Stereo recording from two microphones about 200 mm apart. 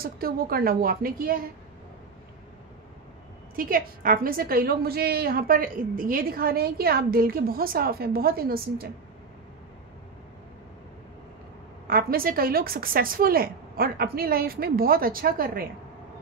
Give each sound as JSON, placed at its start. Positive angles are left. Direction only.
{"t": 0.0, "sound": "a woman's voice", "side_deg": -50}
{"t": 3.5, "sound": "a woman's voice", "side_deg": -45}
{"t": 11.9, "sound": "a woman's voice", "side_deg": -50}